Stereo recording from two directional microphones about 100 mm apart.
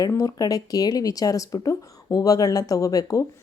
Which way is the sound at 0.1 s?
35° left (ahead or behind).